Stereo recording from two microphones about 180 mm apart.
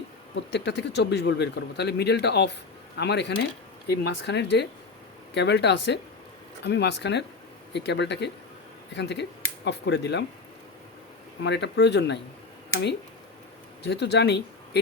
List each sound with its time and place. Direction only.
0.3 s speech: 70° left (ahead or behind)
11.4 s speech: 75° left (ahead or behind)
13.8 s speech: 70° left (ahead or behind)